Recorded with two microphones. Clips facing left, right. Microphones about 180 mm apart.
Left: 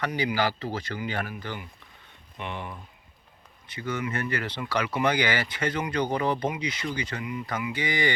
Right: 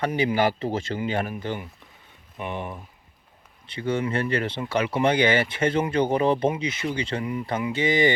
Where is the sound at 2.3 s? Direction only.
15° right (ahead or behind).